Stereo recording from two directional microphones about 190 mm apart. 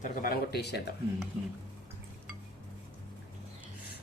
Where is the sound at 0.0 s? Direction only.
50° left (ahead or behind).